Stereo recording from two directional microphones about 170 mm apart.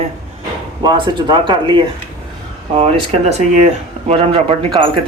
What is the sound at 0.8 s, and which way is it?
Speech, 25° right (ahead or behind).